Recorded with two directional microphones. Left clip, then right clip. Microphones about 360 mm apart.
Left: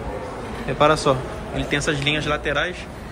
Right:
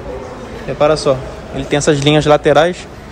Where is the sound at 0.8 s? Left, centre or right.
Centre.